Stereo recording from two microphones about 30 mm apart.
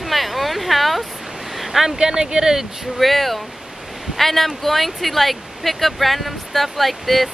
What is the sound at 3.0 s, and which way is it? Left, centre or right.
Speech, centre.